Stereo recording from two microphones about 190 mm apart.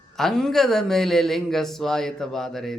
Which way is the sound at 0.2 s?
Centre (ahead or behind).